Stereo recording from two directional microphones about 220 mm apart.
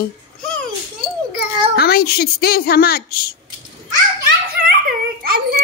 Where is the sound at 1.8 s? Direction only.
45° left (ahead or behind).